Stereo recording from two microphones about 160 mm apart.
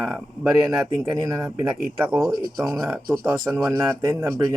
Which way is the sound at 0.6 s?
20° right (ahead or behind).